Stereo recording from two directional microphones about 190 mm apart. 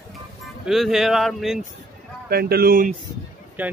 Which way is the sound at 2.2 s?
55° right (ahead or behind).